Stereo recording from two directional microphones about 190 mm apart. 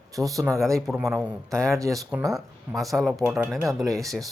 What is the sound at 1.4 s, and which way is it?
Speech, 15° right (ahead or behind).